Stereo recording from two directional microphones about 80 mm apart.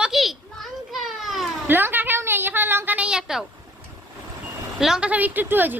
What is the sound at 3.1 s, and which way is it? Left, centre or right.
Speech, centre.